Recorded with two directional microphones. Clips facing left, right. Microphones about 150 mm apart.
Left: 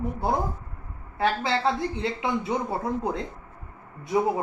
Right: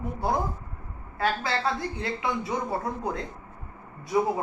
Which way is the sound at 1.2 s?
25° left (ahead or behind).